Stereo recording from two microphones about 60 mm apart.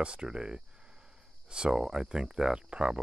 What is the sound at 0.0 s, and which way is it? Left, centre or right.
Speech, centre.